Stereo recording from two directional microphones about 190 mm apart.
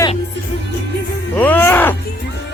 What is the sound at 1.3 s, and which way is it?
Speech, 10° left (ahead or behind).